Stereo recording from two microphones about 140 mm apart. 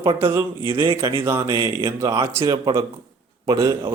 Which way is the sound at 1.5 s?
35° right (ahead or behind).